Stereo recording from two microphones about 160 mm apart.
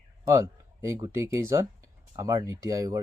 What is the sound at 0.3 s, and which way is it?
Speech, 20° right (ahead or behind).